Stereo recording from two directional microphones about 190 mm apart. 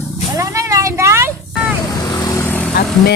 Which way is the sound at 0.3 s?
15° right (ahead or behind).